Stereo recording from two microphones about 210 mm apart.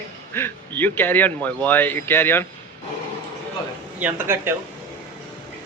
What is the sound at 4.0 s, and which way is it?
Speech, 10° right (ahead or behind).